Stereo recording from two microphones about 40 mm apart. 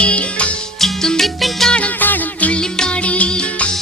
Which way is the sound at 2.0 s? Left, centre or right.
Left.